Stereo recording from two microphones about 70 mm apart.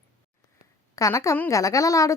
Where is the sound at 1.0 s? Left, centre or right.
Left.